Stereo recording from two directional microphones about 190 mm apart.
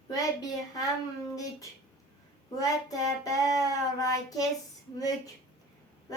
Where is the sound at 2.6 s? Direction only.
20° left (ahead or behind).